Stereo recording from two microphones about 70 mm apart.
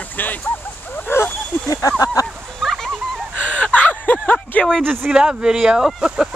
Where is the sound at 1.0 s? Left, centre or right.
Left.